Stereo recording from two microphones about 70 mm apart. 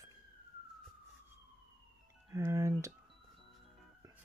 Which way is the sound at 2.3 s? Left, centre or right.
Right.